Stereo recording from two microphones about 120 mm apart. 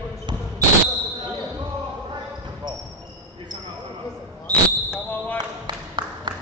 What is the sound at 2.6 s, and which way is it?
Basketball bounce, 40° right (ahead or behind).